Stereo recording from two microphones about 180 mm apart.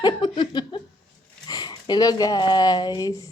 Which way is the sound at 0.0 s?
25° left (ahead or behind).